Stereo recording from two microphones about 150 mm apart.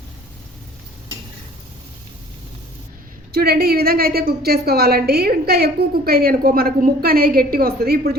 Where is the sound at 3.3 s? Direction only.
90° right.